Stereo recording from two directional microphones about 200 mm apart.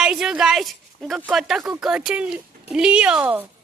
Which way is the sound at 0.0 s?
5° right (ahead or behind).